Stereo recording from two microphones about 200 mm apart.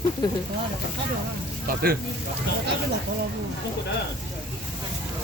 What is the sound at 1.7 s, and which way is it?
Speech, 45° right (ahead or behind).